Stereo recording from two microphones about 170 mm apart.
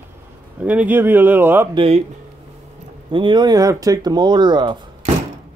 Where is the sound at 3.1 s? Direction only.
30° right (ahead or behind).